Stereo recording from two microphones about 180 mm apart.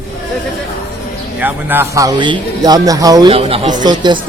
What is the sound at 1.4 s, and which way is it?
Speech, 10° right (ahead or behind).